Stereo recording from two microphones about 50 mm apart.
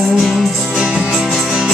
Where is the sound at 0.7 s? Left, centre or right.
Centre.